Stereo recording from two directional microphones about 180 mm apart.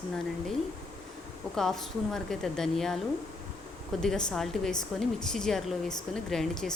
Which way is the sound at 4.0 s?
Centre (ahead or behind).